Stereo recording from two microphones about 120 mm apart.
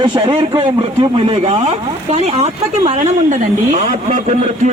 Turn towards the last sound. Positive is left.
turn(degrees=-85)